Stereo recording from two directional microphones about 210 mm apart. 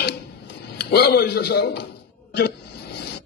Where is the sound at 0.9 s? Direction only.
50° left (ahead or behind).